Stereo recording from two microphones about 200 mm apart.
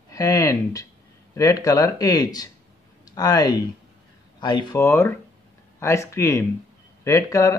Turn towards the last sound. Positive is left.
turn(degrees=15)  # may be behind; listen again after turning